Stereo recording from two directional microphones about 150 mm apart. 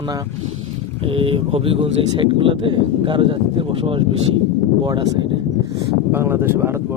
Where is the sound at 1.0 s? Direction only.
40° right (ahead or behind).